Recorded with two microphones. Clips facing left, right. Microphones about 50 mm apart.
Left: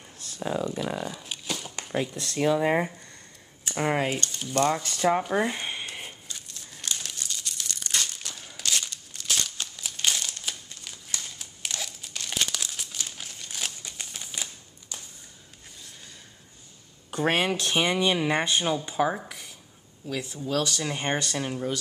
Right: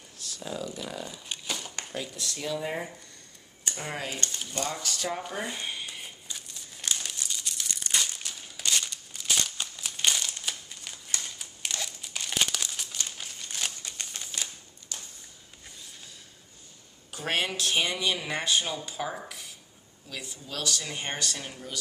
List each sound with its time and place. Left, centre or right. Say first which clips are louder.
0.2 s a sound: left 6 dB; left
0.7 s speech: left 7 dB; left
1.2 s a sound: left 2 dB; centre
2.1 s speech: left 10 dB; left
2.6 s speech: left 9 dB; left
3.7 s speech: left 11 dB; left
4.3 s a sound: left 3 dB; centre
4.9 s speech: left 9 dB; left
6.2 s crumpling: even; centre
17.1 s speech: left 5 dB; left
20.4 s speech: left 6 dB; centre
21.0 s speech: left 6 dB; left